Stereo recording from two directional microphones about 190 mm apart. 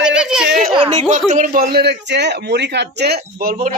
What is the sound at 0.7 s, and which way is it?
A man's voice, 30° right (ahead or behind).